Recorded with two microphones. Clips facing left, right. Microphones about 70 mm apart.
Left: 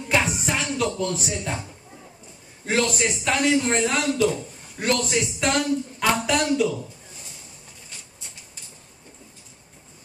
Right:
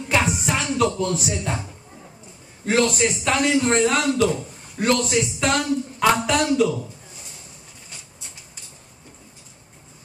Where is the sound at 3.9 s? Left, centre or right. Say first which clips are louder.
Right 3 dB; right.